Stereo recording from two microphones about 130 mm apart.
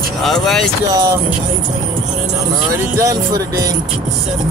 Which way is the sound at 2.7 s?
25° right (ahead or behind).